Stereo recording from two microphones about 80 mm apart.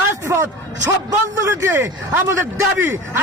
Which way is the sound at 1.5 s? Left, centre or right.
Right.